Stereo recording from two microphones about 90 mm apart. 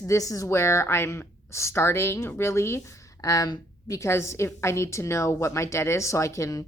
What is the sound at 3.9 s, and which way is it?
A woman's voice, 30° left (ahead or behind).